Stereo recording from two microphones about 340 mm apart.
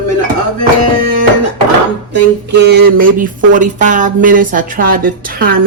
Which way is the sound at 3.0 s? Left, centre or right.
Right.